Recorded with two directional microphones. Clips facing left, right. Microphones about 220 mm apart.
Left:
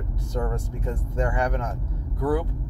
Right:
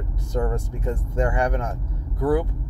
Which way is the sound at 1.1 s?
10° right (ahead or behind).